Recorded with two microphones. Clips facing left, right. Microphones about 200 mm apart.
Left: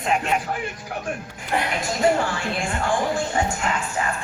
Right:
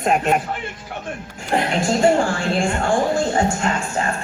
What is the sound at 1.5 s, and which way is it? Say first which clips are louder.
A woman's voice: right 6 dB; 30° right (ahead or behind).